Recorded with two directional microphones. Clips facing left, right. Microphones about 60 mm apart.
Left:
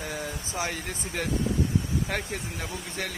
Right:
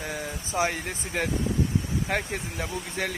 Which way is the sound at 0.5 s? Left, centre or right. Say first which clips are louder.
Right 6 dB; right.